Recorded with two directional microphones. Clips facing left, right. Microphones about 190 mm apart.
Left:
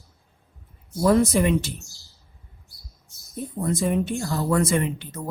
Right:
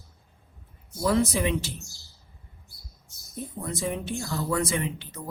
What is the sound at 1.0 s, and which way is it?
Speech, 50° left (ahead or behind).